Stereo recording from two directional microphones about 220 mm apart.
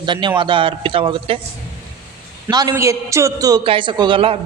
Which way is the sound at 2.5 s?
15° right (ahead or behind).